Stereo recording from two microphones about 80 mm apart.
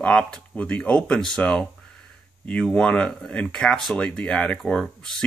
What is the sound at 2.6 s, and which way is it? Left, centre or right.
Speech, centre.